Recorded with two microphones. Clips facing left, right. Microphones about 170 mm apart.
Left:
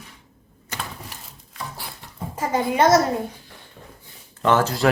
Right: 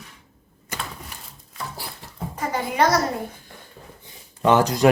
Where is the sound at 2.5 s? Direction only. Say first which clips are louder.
Left 4 dB; 25° left (ahead or behind).